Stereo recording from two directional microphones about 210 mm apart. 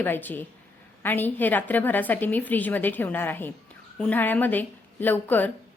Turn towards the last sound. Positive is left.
turn(degrees=10)  # may be behind; listen again after turning